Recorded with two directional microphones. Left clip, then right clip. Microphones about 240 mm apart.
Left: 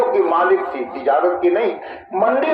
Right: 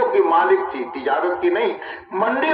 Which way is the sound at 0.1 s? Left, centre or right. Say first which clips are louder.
Even; right.